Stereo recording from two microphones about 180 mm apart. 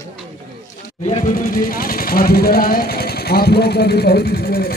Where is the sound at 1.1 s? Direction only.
45° left (ahead or behind).